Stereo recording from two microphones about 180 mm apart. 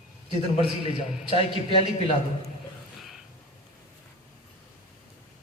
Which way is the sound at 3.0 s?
Centre (ahead or behind).